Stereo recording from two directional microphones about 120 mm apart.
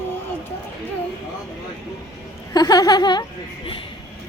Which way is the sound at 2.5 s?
30° left (ahead or behind).